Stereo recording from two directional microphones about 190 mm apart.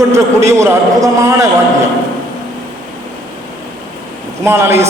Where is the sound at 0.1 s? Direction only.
15° right (ahead or behind).